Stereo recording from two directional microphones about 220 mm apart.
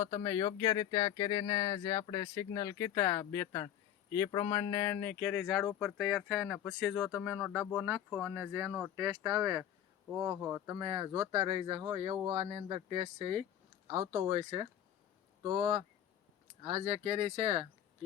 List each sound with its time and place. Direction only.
0.0 s speech: 30° left (ahead or behind)
0.3 s speech: 15° left (ahead or behind); by 14.7 s 25° right (ahead or behind)
16.6 s speech: 30° right (ahead or behind)